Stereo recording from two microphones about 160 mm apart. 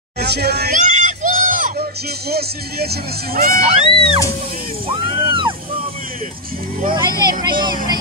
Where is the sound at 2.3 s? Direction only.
80° right.